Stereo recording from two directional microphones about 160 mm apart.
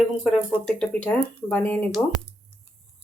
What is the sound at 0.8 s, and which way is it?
Speech, 10° left (ahead or behind).